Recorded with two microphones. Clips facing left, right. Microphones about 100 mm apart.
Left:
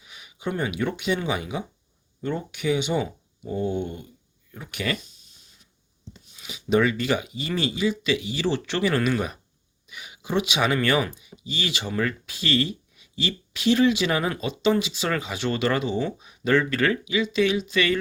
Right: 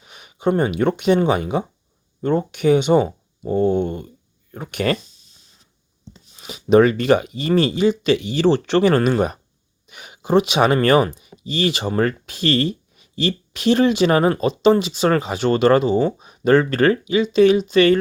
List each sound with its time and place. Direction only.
0.0 s speech: 55° right (ahead or behind)
6.3 s speech: 45° right (ahead or behind)
11.9 s speech: 45° right (ahead or behind)
14.3 s speech: 55° right (ahead or behind)